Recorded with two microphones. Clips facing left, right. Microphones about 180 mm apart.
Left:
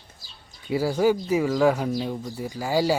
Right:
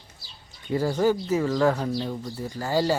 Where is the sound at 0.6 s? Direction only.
10° left (ahead or behind).